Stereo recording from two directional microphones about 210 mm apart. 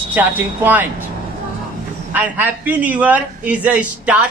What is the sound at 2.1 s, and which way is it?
A man's voice, 10° right (ahead or behind).